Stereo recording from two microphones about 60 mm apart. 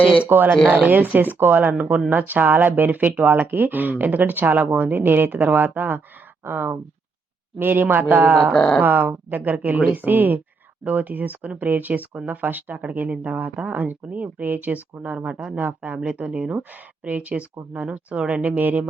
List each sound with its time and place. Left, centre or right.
0.3 s speech: right
8.5 s speech: centre
8.8 s speech: right